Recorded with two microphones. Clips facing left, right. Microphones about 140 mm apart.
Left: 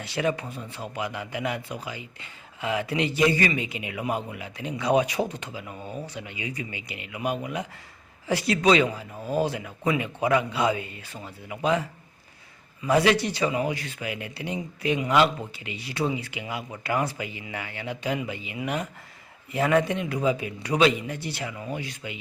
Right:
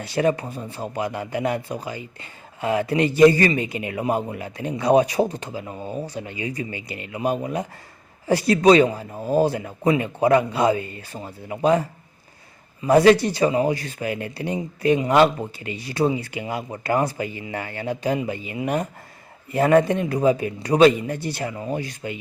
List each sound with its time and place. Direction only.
0.0 s speech: 40° right (ahead or behind)
12.9 s a man's voice: 40° right (ahead or behind)